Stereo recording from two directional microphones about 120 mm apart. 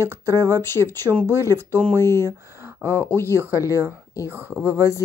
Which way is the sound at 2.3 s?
25° right (ahead or behind).